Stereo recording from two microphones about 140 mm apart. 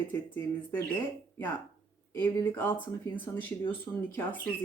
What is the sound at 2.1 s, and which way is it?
Speech, 20° left (ahead or behind).